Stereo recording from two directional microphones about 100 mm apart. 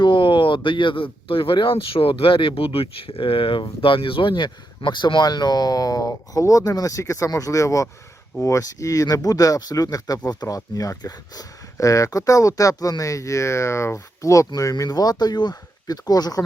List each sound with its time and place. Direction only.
0.0 s speech: 50° left (ahead or behind)